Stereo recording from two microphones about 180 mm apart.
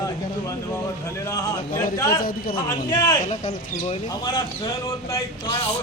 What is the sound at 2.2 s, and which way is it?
Speech, 55° left (ahead or behind).